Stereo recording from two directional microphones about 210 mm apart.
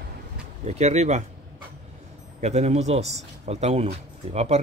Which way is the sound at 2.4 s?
30° right (ahead or behind).